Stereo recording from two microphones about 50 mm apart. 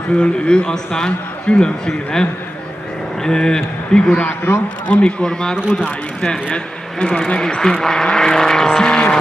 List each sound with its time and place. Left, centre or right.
0.2 s a man's voice: centre
3.3 s speech: centre
4.5 s speech: left
4.8 s a man's voice: left
5.2 s speech: centre
5.6 s speech: centre
6.2 s a man's voice: centre
8.7 s vehicle: centre